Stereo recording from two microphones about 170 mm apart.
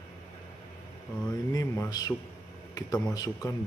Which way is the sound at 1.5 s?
20° left (ahead or behind).